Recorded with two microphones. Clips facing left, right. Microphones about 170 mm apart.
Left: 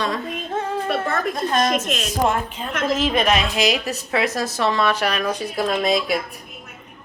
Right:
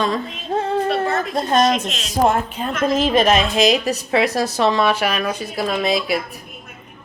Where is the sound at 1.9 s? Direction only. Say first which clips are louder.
Left 5 dB; 50° left (ahead or behind).